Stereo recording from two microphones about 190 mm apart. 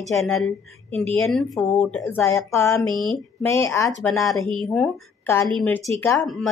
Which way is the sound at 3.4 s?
15° left (ahead or behind).